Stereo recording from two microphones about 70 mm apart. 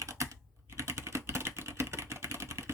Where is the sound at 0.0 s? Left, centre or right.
Right.